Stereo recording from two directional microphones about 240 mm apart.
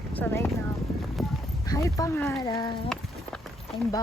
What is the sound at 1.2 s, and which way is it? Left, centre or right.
Clip-clop, centre.